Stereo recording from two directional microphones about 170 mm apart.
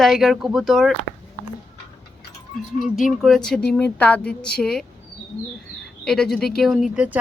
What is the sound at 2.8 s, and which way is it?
Speech, centre (ahead or behind).